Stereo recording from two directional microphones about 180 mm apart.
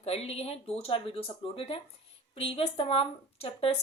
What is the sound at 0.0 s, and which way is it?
A woman's voice, 35° left (ahead or behind).